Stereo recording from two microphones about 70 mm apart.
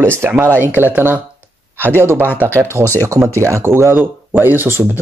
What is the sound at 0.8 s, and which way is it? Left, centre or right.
A man's voice, right.